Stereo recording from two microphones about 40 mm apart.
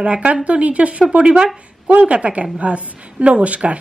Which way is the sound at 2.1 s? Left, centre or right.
Right.